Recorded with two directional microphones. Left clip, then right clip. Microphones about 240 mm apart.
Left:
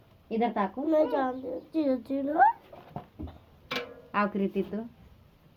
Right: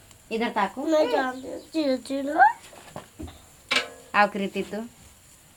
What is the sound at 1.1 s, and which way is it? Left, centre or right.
A woman's voice, centre.